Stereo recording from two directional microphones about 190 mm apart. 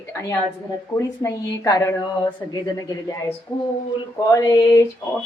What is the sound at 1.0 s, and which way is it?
A woman's voice, 15° left (ahead or behind).